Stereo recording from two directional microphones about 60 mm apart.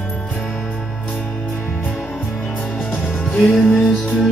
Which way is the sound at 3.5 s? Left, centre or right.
Centre.